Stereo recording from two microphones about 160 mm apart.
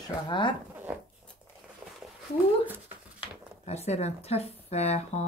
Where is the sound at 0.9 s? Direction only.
10° right (ahead or behind).